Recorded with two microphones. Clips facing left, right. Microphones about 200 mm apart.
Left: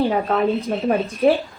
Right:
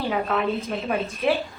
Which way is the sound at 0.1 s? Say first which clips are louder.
Left 5 dB; 35° left (ahead or behind).